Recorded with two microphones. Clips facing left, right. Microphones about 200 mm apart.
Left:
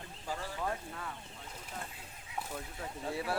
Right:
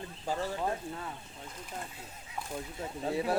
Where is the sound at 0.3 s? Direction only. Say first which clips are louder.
Right 5 dB; 25° right (ahead or behind).